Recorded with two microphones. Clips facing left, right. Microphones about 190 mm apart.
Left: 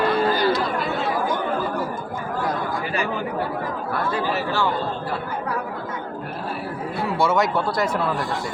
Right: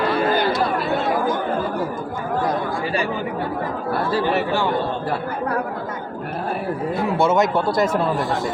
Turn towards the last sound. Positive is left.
turn(degrees=-25)  # may be behind; listen again after turning